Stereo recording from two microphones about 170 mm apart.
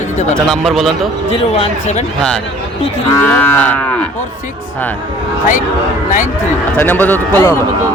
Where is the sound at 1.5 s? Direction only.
35° left (ahead or behind).